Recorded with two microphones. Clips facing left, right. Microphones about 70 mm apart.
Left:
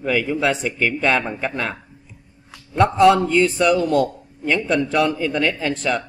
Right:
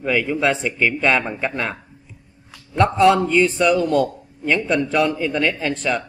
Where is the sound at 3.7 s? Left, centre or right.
Right.